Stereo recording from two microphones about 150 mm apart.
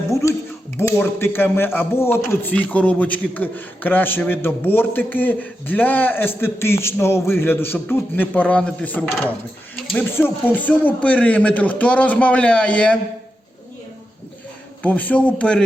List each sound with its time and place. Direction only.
0.1 s a sound: 20° left (ahead or behind)
0.8 s a man's voice: 15° left (ahead or behind)
14.8 s a man's voice: 10° left (ahead or behind)